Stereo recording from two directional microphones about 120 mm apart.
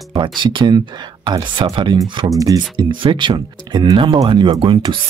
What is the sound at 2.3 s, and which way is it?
Speech, 30° right (ahead or behind).